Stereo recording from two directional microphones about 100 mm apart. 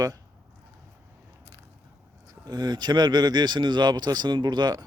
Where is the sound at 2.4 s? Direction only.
40° right (ahead or behind).